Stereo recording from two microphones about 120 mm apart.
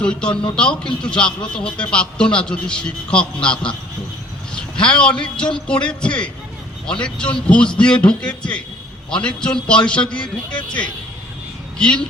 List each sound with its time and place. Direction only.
0.0 s a man's voice: 10° left (ahead or behind)
4.5 s a sound: 10° left (ahead or behind)
5.2 s a man's voice: 5° left (ahead or behind)
11.8 s a man's voice: 10° left (ahead or behind)